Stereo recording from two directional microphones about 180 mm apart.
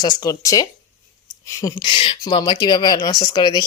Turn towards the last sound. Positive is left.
turn(degrees=20)  # may be behind; listen again after turning